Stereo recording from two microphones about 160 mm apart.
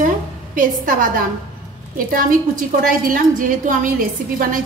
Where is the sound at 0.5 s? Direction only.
60° right (ahead or behind).